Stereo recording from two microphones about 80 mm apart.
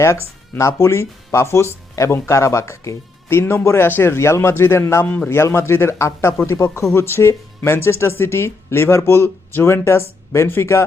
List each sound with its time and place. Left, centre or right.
0.0 s speech: left
5.0 s a man's voice: centre
5.4 s speech: left